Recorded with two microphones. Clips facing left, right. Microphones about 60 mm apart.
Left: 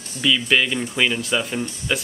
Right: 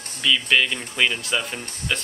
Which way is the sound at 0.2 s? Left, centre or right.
Centre.